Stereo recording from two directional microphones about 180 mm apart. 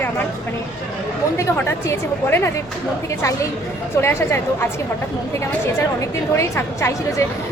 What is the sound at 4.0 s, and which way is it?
Speech, 15° left (ahead or behind).